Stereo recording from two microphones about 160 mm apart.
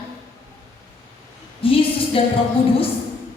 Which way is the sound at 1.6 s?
35° left (ahead or behind).